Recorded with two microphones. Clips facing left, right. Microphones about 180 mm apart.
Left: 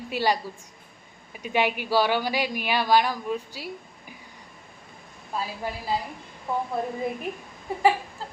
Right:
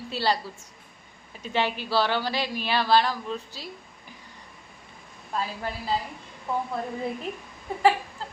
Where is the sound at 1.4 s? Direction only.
15° left (ahead or behind).